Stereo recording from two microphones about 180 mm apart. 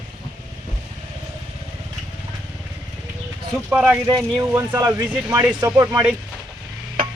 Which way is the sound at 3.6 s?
10° right (ahead or behind).